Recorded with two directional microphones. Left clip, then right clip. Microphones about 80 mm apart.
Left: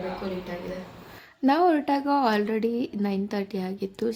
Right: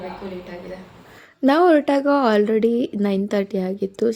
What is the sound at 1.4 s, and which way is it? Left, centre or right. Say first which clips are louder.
A woman's voice: right 6 dB; right.